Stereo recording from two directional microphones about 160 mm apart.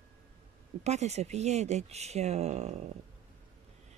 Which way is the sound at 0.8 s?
45° right (ahead or behind).